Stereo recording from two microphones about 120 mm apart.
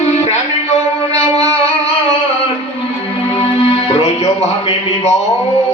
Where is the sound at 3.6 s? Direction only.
55° left (ahead or behind).